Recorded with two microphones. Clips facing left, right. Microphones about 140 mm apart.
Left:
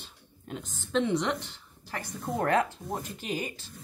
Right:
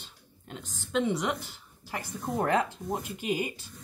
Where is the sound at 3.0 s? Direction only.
15° right (ahead or behind).